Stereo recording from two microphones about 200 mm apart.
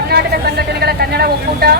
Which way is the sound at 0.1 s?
55° right (ahead or behind).